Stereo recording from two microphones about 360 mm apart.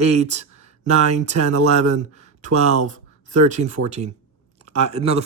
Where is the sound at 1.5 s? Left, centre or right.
Right.